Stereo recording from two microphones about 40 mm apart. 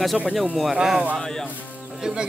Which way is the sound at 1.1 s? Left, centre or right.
Centre.